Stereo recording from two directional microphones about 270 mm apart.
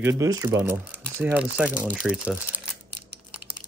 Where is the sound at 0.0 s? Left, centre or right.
Centre.